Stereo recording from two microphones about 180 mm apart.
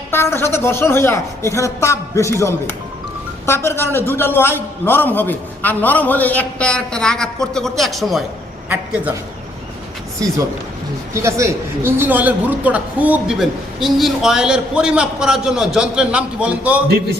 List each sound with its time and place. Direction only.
0.1 s a man's voice: 15° left (ahead or behind); by 9.1 s 10° right (ahead or behind)
10.2 s a man's voice: 20° right (ahead or behind)